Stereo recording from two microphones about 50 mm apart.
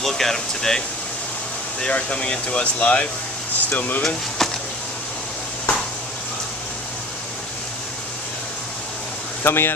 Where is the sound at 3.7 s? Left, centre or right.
Left.